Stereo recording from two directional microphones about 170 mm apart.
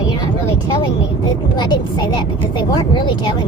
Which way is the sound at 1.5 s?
25° left (ahead or behind).